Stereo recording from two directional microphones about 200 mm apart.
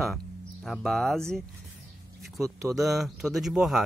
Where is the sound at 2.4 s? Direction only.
15° right (ahead or behind).